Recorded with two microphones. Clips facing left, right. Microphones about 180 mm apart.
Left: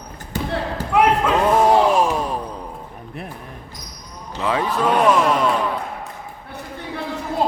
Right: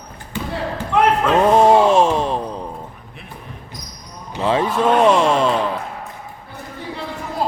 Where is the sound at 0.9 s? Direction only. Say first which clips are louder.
Even; 10° left (ahead or behind).